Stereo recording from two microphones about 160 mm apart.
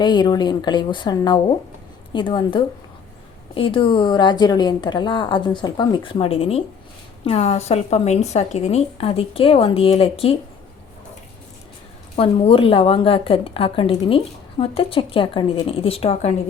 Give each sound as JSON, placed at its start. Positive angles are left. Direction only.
{"t": 0.0, "sound": "a woman's voice", "side_deg": 30}
{"t": 12.1, "sound": "a woman's voice", "side_deg": 35}